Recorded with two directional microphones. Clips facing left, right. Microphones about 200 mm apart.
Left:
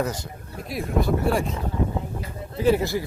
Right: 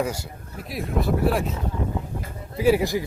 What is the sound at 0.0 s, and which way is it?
Speech, 10° right (ahead or behind).